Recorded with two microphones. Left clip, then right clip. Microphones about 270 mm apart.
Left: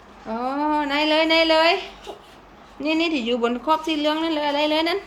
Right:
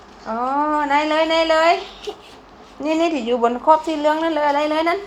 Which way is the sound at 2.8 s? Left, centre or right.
Right.